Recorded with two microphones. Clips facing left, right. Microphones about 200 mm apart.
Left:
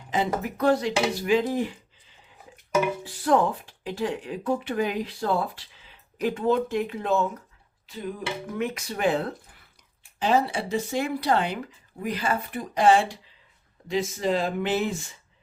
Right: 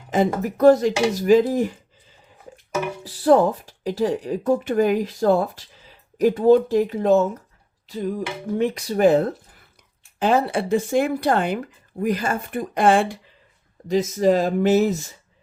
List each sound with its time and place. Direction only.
0.1 s speech: 45° right (ahead or behind)
3.0 s speech: 35° right (ahead or behind); by 13.1 s 55° right (ahead or behind)
13.8 s speech: 40° right (ahead or behind)